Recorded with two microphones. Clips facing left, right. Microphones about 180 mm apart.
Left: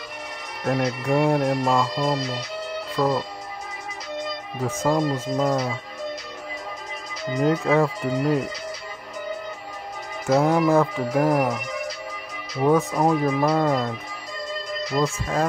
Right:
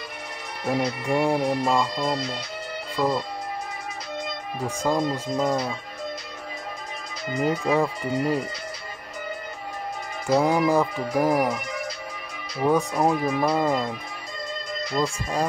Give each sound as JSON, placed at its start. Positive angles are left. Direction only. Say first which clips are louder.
{"t": 0.7, "sound": "speech", "louder": "left 2 dB", "side_deg": 0}
{"t": 4.6, "sound": "speech", "louder": "left 2 dB", "side_deg": 0}
{"t": 7.4, "sound": "speech", "louder": "left 3 dB", "side_deg": 0}
{"t": 10.2, "sound": "speech", "louder": "left 2 dB", "side_deg": 0}